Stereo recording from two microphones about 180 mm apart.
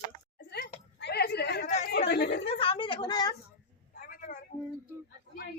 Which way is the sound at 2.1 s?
70° left (ahead or behind).